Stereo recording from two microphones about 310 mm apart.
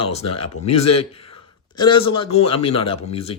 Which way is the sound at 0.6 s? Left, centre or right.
Left.